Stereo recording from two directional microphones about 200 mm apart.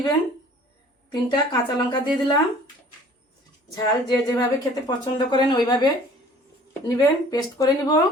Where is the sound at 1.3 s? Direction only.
25° left (ahead or behind).